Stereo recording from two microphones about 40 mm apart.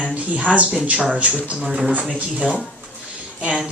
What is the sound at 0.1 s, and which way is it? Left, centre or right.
Speech, right.